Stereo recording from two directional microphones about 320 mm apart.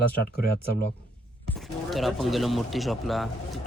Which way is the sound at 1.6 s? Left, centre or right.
Centre.